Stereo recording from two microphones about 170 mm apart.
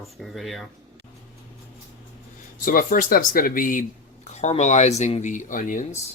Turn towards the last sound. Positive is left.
turn(degrees=50)  # may be behind; listen again after turning